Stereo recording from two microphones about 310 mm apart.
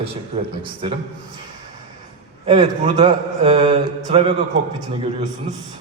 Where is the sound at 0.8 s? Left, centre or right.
Centre.